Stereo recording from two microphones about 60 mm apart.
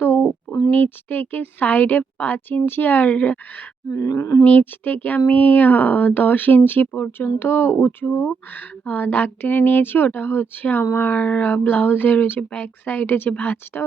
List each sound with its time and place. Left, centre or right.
0.0 s a sound: left
0.7 s speech: left
3.8 s wild animals: left
4.4 s speech: left
8.9 s speech: left
12.4 s speech: left
12.8 s speech: left